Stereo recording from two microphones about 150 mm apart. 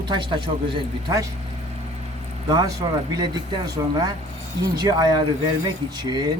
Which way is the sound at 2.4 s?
25° right (ahead or behind).